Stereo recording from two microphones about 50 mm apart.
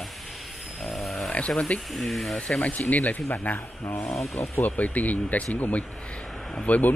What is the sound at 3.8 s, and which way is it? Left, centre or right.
Speech, left.